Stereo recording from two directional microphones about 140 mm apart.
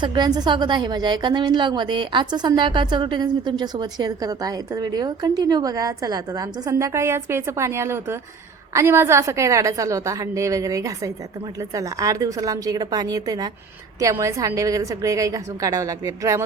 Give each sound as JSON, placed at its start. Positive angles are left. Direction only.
{"t": 0.0, "sound": "a woman's voice", "side_deg": -30}